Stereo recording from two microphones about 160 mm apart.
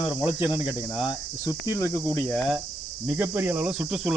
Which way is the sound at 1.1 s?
20° left (ahead or behind).